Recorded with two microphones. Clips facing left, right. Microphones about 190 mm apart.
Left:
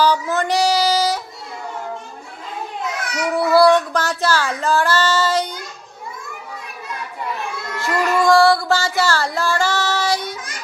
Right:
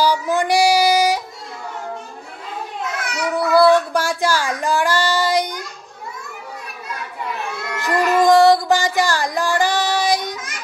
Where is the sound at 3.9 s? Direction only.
10° right (ahead or behind).